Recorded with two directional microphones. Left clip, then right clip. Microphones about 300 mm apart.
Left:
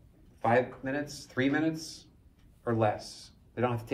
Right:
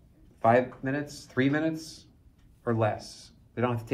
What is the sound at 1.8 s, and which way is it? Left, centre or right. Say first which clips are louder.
Speech: even; centre.